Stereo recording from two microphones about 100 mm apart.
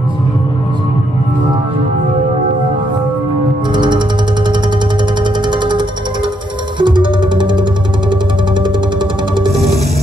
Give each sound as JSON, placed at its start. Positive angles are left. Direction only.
{"t": 3.7, "sound": "music", "side_deg": -50}
{"t": 5.5, "sound": "music", "side_deg": -50}